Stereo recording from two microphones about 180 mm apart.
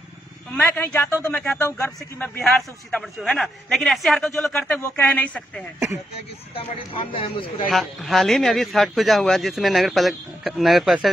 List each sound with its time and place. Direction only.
0.5 s a man's voice: 10° left (ahead or behind)
6.5 s speech: 30° left (ahead or behind)
7.7 s a man's voice: centre (ahead or behind)